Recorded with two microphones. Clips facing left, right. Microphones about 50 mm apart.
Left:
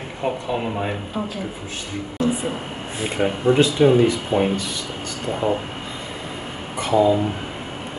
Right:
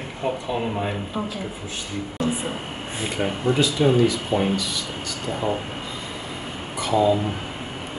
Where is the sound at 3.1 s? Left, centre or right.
Centre.